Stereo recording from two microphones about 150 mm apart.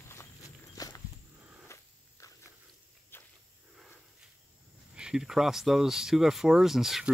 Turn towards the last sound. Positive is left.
turn(degrees=0)  # may be behind; listen again after turning